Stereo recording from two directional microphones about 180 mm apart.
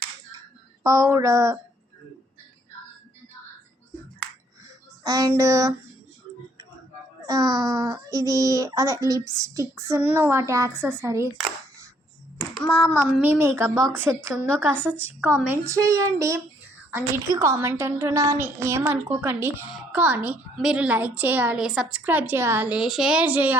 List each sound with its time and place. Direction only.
0.8 s a woman's voice: 15° right (ahead or behind)
5.0 s child singing: 20° right (ahead or behind)
5.3 s a woman's voice: 15° right (ahead or behind)
7.3 s a woman's voice: 20° right (ahead or behind)
12.5 s child singing: 5° left (ahead or behind)
13.2 s a woman's voice: 15° right (ahead or behind)